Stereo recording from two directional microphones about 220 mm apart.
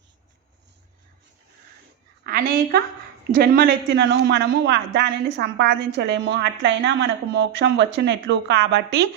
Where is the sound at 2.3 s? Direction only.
40° right (ahead or behind).